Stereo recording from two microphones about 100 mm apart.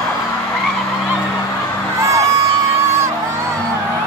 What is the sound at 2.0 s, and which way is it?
Crowd, 30° right (ahead or behind).